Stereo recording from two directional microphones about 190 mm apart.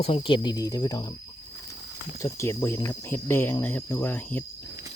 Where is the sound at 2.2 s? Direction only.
15° left (ahead or behind).